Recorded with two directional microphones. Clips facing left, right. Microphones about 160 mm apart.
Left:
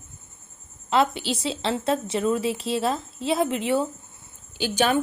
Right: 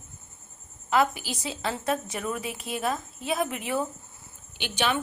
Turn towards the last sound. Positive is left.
turn(degrees=40)  # may be behind; listen again after turning